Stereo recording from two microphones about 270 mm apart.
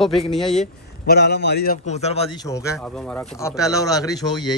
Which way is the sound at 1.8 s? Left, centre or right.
Left.